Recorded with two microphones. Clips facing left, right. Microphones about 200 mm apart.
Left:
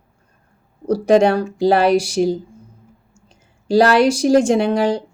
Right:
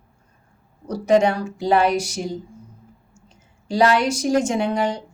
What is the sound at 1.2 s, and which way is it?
Speech, 75° left (ahead or behind).